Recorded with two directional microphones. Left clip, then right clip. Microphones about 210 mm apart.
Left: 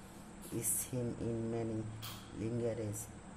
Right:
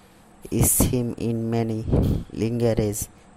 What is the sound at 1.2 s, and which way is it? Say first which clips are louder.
Speech: right 13 dB; 45° right (ahead or behind).